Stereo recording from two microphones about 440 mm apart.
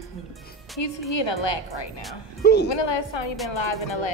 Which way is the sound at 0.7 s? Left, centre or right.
Left.